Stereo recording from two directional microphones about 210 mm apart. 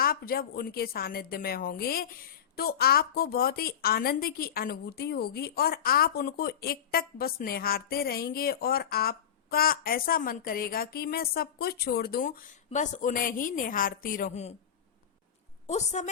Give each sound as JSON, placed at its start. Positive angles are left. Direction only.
{"t": 0.0, "sound": "a woman's voice", "side_deg": 45}
{"t": 15.6, "sound": "a woman's voice", "side_deg": 35}